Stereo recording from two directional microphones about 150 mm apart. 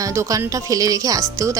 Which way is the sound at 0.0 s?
20° right (ahead or behind).